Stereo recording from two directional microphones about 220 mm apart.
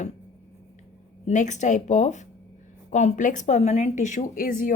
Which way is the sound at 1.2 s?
35° left (ahead or behind).